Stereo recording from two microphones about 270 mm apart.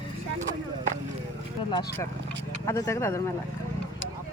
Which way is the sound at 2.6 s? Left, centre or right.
Centre.